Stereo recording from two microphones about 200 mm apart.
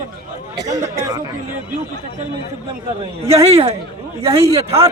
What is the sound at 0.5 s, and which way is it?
Speech, 15° right (ahead or behind).